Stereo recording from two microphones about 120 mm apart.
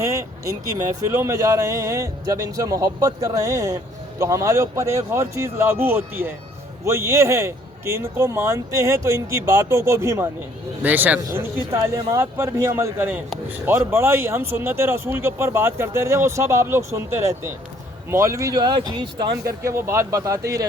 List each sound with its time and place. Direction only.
0.0 s vehicle: 25° right (ahead or behind)
1.0 s speech: 25° right (ahead or behind)
11.3 s speech: 30° right (ahead or behind)